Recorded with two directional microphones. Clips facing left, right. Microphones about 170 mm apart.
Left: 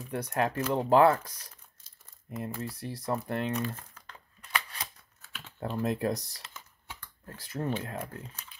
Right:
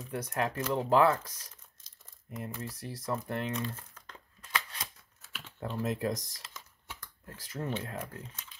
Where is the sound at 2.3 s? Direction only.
25° left (ahead or behind).